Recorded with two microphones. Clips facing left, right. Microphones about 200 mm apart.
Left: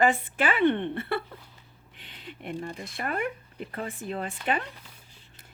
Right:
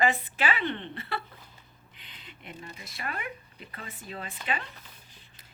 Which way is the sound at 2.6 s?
55° left (ahead or behind).